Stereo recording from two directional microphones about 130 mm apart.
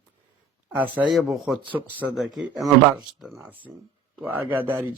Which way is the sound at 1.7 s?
10° right (ahead or behind).